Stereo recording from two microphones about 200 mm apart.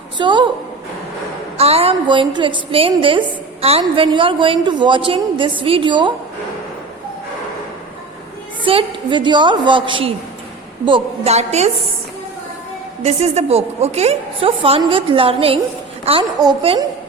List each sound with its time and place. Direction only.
0.2 s a woman's voice: 25° right (ahead or behind)
1.5 s a woman's voice: 30° right (ahead or behind)
8.6 s a woman's voice: 25° right (ahead or behind)
13.0 s a woman's voice: 35° right (ahead or behind)